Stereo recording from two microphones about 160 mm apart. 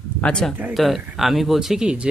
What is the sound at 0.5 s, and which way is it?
Speech, 10° right (ahead or behind).